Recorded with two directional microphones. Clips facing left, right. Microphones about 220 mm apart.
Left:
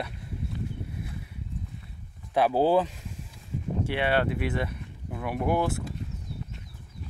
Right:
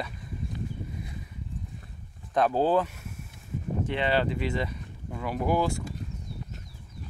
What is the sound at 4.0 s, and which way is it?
Speech, 5° left (ahead or behind).